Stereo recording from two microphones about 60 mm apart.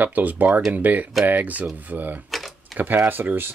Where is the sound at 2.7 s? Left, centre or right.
Right.